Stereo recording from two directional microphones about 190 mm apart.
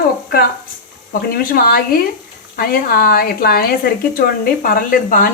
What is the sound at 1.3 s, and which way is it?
Speech, 50° left (ahead or behind).